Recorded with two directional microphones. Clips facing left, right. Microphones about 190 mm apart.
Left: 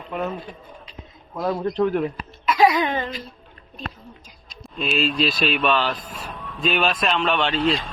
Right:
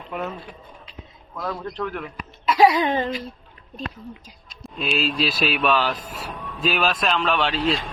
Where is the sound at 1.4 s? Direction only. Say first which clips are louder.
Left 7 dB; 25° left (ahead or behind).